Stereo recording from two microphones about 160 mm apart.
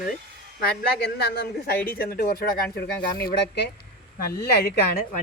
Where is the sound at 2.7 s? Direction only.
85° left.